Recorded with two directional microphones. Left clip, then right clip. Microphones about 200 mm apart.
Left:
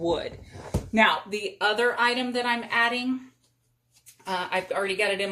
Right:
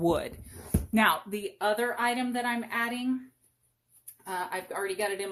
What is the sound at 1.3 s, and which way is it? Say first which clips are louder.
Speech: left 3 dB; 30° right (ahead or behind).